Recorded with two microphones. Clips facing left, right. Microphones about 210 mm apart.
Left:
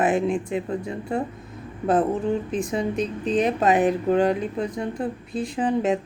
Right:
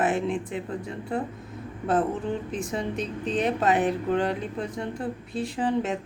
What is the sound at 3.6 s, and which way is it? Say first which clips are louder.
Speech: left 4 dB; 15° left (ahead or behind).